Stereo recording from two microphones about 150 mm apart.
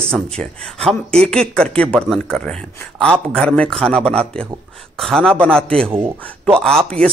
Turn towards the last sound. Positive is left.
turn(degrees=5)  # may be behind; listen again after turning